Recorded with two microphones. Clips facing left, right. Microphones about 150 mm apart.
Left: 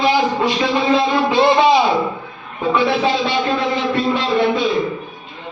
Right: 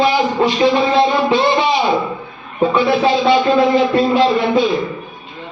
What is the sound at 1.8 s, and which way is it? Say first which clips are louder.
A man's voice: right 1 dB; centre (ahead or behind).